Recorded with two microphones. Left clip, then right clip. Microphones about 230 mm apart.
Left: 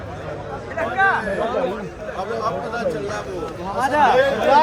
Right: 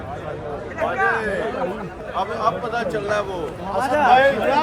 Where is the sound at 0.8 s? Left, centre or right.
Left.